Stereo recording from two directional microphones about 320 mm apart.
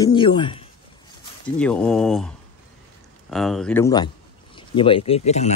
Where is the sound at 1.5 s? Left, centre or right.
Centre.